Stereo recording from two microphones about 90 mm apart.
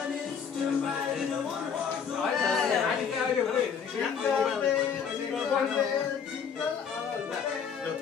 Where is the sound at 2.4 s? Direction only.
5° left (ahead or behind).